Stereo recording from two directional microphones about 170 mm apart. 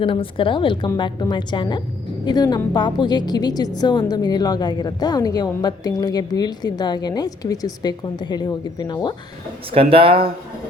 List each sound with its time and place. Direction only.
0.0 s a woman's voice: 30° left (ahead or behind)
9.7 s speech: 30° right (ahead or behind)